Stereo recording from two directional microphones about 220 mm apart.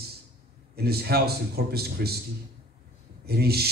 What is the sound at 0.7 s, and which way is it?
A man's voice, 45° right (ahead or behind).